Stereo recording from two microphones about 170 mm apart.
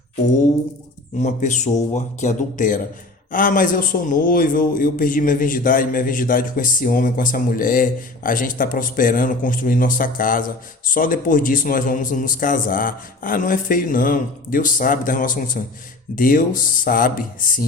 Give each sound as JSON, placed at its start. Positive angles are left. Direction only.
{"t": 1.2, "sound": "a man's voice", "side_deg": 45}